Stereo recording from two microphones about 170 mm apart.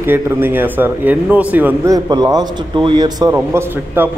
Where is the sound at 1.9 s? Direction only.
25° right (ahead or behind).